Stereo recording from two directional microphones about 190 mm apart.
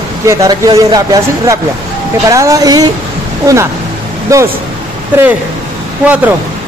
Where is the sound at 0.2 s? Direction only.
15° right (ahead or behind).